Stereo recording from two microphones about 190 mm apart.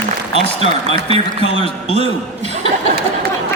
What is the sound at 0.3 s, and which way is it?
Speech, 35° right (ahead or behind).